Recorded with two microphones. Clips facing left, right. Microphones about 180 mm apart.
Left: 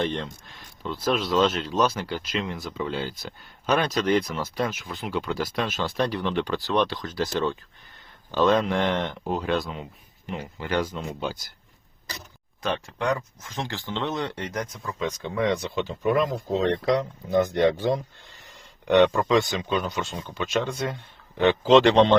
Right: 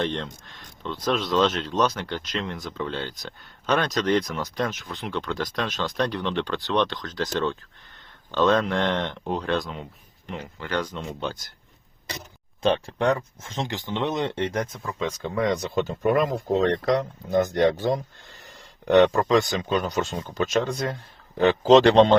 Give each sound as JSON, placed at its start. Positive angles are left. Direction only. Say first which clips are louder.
{"t": 0.0, "sound": "speech", "louder": "even", "side_deg": 5}
{"t": 12.6, "sound": "speech", "louder": "right 5 dB", "side_deg": -30}
{"t": 15.2, "sound": "speech", "louder": "even", "side_deg": -40}
{"t": 17.3, "sound": "speech", "louder": "even", "side_deg": -40}